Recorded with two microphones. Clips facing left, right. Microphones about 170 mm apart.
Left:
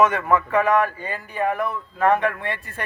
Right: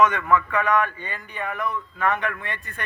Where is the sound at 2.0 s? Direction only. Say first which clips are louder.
Left 6 dB; 35° left (ahead or behind).